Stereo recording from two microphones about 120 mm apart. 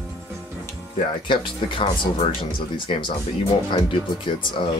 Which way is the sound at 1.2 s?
45° left (ahead or behind).